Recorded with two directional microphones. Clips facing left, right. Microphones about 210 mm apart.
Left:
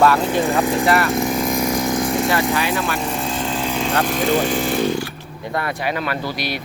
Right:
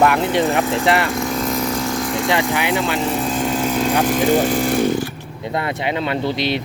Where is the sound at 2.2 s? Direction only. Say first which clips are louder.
Even; 20° right (ahead or behind).